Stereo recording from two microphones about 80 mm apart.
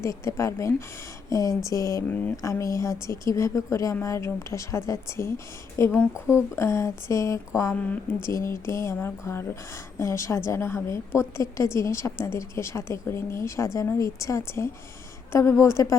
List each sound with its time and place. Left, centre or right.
0.0 s a woman's voice: left
7.7 s speech: centre
8.2 s a woman's voice: left